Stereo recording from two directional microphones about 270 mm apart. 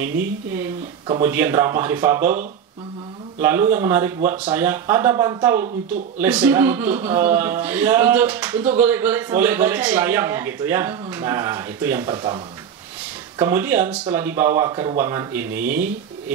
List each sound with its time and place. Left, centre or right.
1.0 s a man's voice: centre
13.4 s a man's voice: centre